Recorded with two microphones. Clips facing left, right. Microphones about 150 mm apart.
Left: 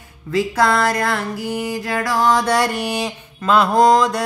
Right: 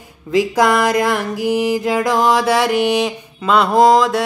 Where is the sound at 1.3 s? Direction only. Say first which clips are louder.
Right 7 dB; 90° right.